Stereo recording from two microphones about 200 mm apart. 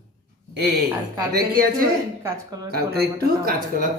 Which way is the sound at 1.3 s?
45° right (ahead or behind).